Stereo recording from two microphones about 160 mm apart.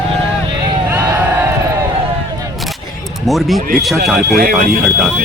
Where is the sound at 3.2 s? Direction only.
Centre (ahead or behind).